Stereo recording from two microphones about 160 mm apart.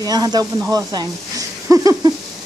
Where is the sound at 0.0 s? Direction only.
25° right (ahead or behind).